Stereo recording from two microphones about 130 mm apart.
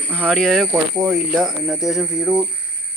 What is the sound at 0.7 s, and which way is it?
Speech, 20° right (ahead or behind).